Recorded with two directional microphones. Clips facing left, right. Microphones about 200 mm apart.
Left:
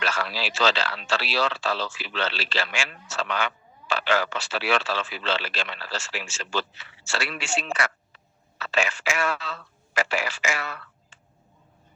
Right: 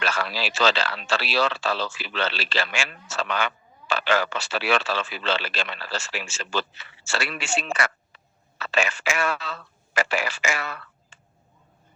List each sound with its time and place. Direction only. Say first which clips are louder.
0.0 s a man's voice: right 1 dB; 55° right (ahead or behind)